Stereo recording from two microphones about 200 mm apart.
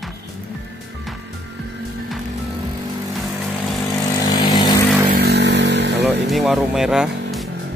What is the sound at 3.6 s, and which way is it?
Vehicle, centre (ahead or behind).